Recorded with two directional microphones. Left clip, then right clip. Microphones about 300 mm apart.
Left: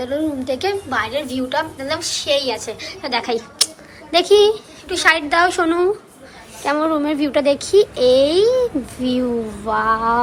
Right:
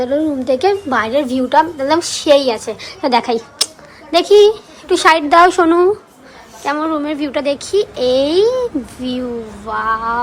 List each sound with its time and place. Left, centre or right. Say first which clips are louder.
0.0 s a woman's voice: right 5 dB; centre